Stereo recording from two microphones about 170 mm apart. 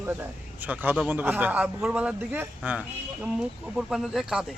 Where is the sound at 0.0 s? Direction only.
10° right (ahead or behind).